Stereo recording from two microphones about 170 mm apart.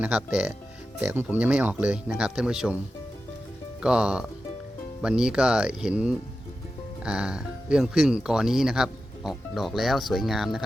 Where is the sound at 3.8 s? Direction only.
5° right (ahead or behind).